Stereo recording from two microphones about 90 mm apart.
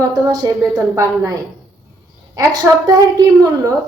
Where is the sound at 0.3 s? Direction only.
40° right (ahead or behind).